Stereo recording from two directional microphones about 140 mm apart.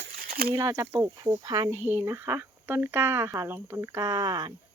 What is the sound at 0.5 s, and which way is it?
Speech, 25° right (ahead or behind).